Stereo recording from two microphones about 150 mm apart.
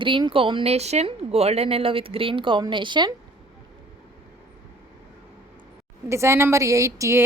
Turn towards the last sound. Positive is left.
turn(degrees=-20)  # may be behind; listen again after turning